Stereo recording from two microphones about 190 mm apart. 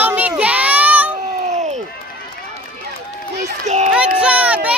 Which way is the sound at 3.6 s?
35° right (ahead or behind).